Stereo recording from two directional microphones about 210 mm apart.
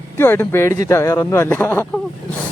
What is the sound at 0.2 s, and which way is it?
Speech, 10° left (ahead or behind).